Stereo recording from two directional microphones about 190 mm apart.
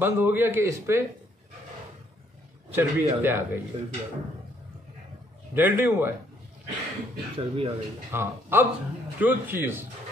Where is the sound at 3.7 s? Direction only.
30° right (ahead or behind).